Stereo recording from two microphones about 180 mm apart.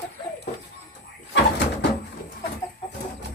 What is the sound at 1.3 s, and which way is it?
Bird, 70° left (ahead or behind).